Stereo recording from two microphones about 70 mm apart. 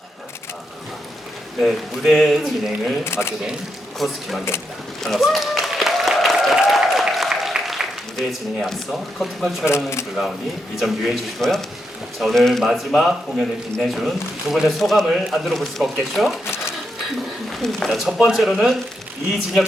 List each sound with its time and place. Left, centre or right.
1.6 s speech: centre
3.0 s speech: left
3.9 s speech: centre
5.0 s applause: centre
8.6 s speech: centre
9.6 s speech: left
10.8 s speech: centre
17.6 s speech: centre
18.0 s speech: centre